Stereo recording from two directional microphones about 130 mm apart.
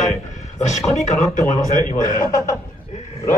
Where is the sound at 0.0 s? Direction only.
70° left (ahead or behind); by 2.5 s 85° left.